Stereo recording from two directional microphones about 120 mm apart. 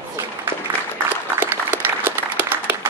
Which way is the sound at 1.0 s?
15° right (ahead or behind).